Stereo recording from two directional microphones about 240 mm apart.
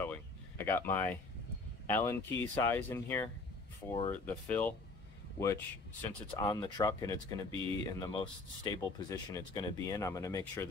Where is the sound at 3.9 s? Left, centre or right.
Centre.